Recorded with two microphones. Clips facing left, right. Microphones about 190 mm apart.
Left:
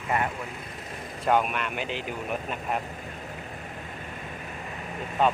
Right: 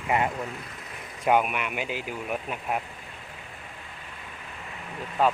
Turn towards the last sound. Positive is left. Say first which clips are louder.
# even
turn(degrees=-5)  # may be behind; listen again after turning